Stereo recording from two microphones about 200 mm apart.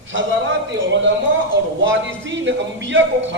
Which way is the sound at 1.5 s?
70° right (ahead or behind).